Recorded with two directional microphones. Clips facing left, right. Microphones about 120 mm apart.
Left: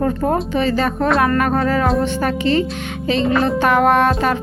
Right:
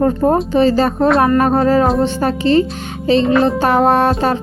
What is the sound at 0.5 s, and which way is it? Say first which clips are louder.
Music: right 5 dB; 35° right (ahead or behind).